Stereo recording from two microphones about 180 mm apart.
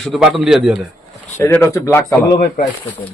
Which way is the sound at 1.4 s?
15° left (ahead or behind).